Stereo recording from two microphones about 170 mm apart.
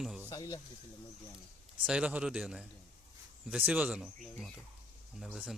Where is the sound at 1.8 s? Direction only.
5° right (ahead or behind).